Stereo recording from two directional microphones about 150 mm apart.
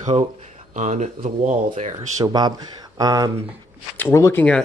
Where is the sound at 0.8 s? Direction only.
55° right (ahead or behind).